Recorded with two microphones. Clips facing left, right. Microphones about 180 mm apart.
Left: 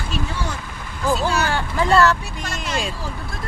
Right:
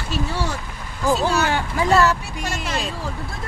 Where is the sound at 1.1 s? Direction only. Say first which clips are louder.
Right 1 dB; 15° right (ahead or behind).